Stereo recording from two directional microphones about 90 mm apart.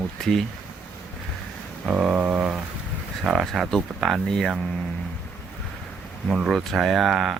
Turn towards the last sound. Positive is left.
turn(degrees=0)  # may be behind; listen again after turning